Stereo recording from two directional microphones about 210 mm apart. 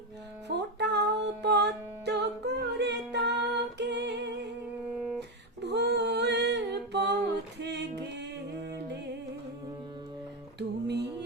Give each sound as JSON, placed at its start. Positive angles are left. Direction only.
{"t": 0.4, "sound": "music", "side_deg": -55}
{"t": 3.8, "sound": "singing", "side_deg": -55}
{"t": 4.9, "sound": "a sound", "side_deg": 0}
{"t": 5.6, "sound": "a sound", "side_deg": -55}
{"t": 7.6, "sound": "music", "side_deg": -55}
{"t": 10.6, "sound": "music", "side_deg": -55}